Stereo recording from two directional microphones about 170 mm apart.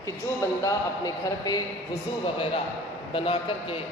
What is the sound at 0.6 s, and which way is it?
Speech, 20° left (ahead or behind).